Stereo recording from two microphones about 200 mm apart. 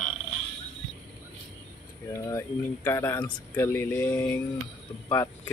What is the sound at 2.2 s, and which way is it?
Speech, 15° left (ahead or behind).